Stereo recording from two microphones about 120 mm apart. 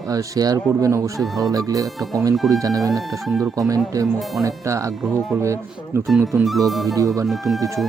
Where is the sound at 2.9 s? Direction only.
Centre (ahead or behind).